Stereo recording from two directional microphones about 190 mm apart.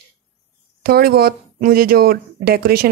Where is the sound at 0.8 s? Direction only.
55° right (ahead or behind).